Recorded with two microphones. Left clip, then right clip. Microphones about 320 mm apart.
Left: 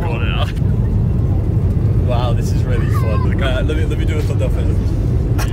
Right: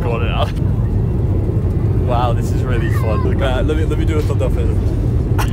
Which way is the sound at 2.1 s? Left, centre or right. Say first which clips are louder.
Right 4 dB; centre.